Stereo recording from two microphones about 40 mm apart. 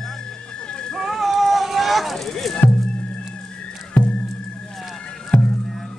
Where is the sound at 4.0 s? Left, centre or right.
Left.